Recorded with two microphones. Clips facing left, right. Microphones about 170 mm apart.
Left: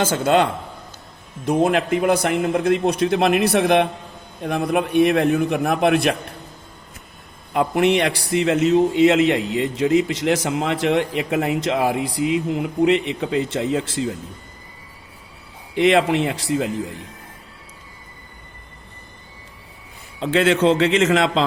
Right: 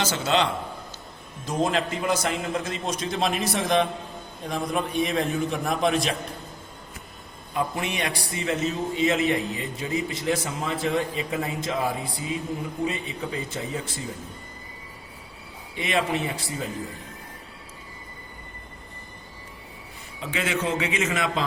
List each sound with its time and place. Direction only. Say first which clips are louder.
0.0 s a man's voice: left 6 dB; 50° left (ahead or behind)
7.5 s a man's voice: left 10 dB; 70° left (ahead or behind); by 14.1 s 85° left
15.7 s a man's voice: left 9 dB; 85° left
20.1 s a man's voice: left 10 dB; 75° left (ahead or behind)